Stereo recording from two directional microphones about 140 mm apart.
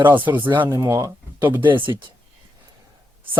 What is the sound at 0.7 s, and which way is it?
Speech, 25° right (ahead or behind).